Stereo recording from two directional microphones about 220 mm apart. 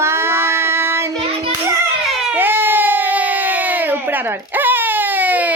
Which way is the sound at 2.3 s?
10° right (ahead or behind).